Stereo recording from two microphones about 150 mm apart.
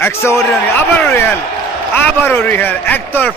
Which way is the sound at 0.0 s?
20° left (ahead or behind).